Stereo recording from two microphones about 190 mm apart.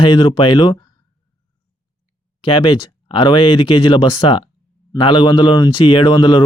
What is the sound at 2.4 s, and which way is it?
Speech, 25° left (ahead or behind).